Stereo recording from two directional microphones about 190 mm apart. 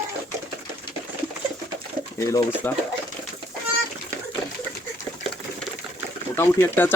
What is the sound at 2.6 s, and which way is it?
Speech, 10° left (ahead or behind).